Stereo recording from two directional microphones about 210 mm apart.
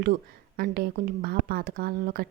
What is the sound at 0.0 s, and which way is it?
Speech, 45° right (ahead or behind).